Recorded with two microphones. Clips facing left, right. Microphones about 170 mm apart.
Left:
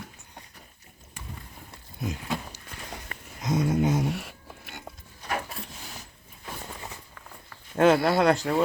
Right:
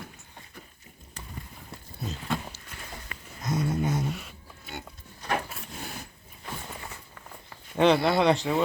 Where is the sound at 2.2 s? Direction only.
10° left (ahead or behind).